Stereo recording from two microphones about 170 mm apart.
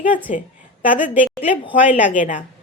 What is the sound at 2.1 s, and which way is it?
Speech, 50° left (ahead or behind).